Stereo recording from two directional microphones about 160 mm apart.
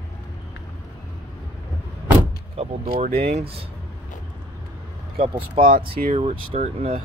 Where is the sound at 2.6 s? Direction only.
35° right (ahead or behind).